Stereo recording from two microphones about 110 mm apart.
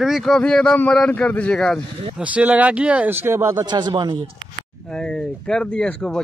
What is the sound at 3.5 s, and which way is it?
Speech, 40° right (ahead or behind).